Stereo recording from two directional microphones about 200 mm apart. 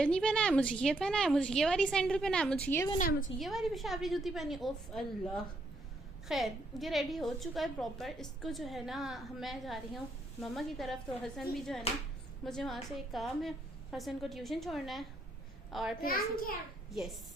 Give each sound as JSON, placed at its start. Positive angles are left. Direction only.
{"t": 0.0, "sound": "a woman's voice", "side_deg": 5}
{"t": 3.0, "sound": "a woman's voice", "side_deg": 40}
{"t": 3.3, "sound": "a woman's voice", "side_deg": 0}
{"t": 16.0, "sound": "a child's voice", "side_deg": 45}